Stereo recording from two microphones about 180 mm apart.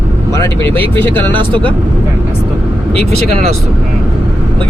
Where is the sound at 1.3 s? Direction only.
25° right (ahead or behind).